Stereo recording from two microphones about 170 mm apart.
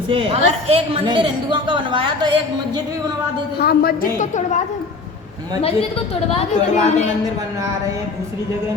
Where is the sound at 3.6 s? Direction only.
65° left (ahead or behind); by 4.6 s 45° left (ahead or behind).